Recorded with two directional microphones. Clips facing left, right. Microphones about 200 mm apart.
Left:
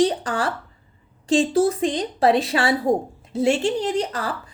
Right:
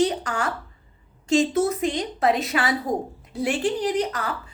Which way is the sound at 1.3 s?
30° left (ahead or behind).